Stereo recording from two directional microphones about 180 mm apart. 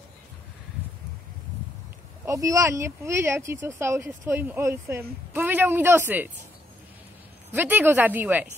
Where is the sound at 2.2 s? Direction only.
20° right (ahead or behind).